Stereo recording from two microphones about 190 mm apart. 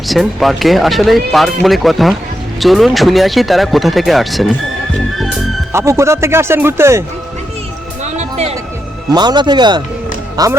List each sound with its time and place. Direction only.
0.1 s speech: centre (ahead or behind)
5.1 s music: centre (ahead or behind)
5.7 s speech: 15° right (ahead or behind)
8.0 s music: 35° right (ahead or behind)
9.1 s speech: 20° right (ahead or behind)